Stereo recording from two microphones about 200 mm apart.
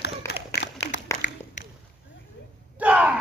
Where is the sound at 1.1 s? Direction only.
15° left (ahead or behind).